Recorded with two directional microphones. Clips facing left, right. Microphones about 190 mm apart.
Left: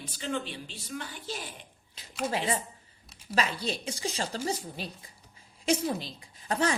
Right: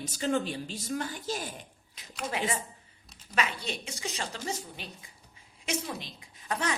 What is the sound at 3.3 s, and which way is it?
A woman's voice, 35° left (ahead or behind).